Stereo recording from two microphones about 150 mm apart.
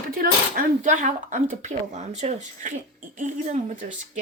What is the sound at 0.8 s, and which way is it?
Speech, 55° right (ahead or behind).